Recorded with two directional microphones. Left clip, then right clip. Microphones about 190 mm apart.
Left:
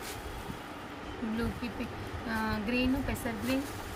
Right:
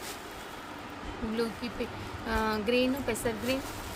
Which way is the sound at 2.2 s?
55° right (ahead or behind).